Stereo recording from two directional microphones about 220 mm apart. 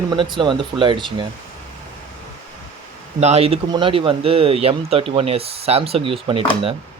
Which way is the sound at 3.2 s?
30° right (ahead or behind).